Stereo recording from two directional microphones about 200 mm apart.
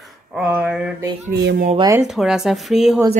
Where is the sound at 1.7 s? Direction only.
15° right (ahead or behind).